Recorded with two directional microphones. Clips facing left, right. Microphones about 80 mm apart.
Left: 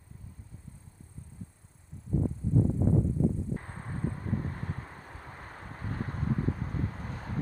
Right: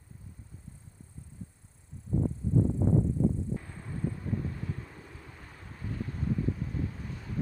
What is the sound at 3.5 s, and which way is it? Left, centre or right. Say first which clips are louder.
Vehicle: even; left.